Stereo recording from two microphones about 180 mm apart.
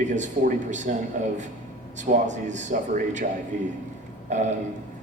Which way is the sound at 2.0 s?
45° right (ahead or behind).